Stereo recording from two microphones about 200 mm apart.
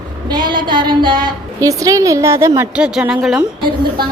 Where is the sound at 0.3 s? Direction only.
20° right (ahead or behind); by 3.4 s centre (ahead or behind).